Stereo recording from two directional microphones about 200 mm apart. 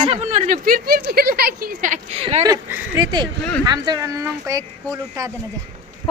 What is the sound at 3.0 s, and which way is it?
Speech, 20° right (ahead or behind).